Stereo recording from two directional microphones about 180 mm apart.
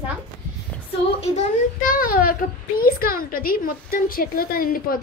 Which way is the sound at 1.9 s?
50° left (ahead or behind).